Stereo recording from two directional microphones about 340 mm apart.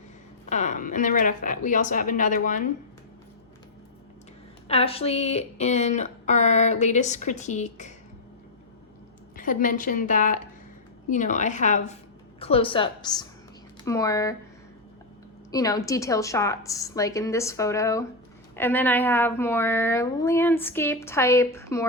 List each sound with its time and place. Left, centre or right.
0.5 s speech: left
4.7 s speech: centre
9.3 s a woman's voice: left
15.5 s speech: centre